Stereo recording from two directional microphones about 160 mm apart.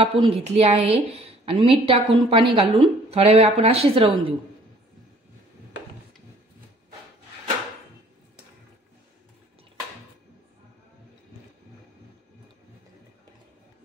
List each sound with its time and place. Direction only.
0.0 s a woman's voice: 35° right (ahead or behind)